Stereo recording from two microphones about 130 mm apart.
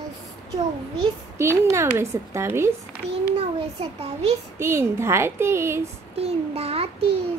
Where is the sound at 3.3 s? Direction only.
55° right (ahead or behind).